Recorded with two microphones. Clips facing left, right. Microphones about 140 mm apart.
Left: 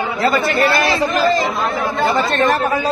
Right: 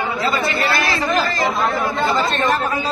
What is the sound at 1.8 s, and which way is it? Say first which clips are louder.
Speech: left 2 dB; 55° left (ahead or behind).